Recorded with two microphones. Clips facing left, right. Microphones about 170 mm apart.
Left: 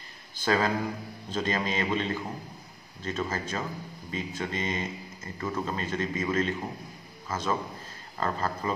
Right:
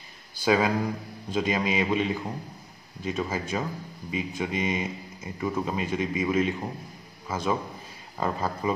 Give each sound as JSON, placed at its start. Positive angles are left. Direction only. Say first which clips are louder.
{"t": 0.4, "sound": "a man's voice", "louder": "right 3 dB", "side_deg": -10}